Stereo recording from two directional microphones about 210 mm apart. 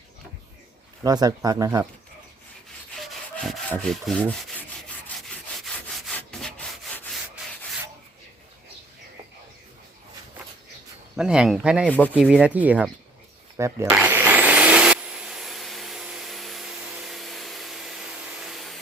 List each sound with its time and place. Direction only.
1.0 s speech: 20° right (ahead or behind)
2.9 s rub: centre (ahead or behind)
5.0 s wood: centre (ahead or behind)
11.2 s speech: 5° right (ahead or behind)
11.9 s speech: 10° left (ahead or behind)
12.1 s speech: 5° right (ahead or behind)
13.6 s vacuum cleaner: 15° right (ahead or behind)